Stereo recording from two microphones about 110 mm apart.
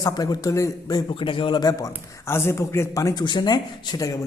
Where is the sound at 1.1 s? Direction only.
50° left (ahead or behind).